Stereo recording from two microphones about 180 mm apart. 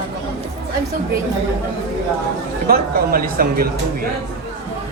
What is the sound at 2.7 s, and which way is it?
Speech, 55° right (ahead or behind).